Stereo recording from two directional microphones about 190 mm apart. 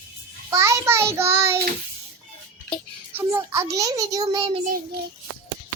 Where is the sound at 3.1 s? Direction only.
10° right (ahead or behind).